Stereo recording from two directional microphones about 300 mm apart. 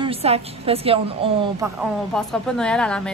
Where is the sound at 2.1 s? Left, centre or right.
Centre.